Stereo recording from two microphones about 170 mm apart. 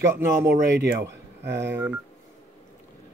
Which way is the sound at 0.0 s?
15° right (ahead or behind).